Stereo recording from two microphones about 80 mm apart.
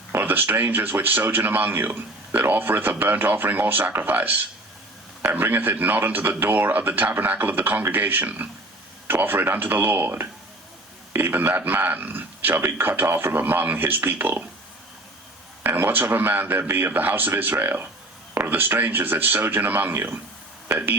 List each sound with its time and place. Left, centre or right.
0.1 s speech: right
15.6 s speech: right